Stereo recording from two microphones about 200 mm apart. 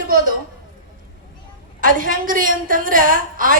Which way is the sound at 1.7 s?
45° right (ahead or behind).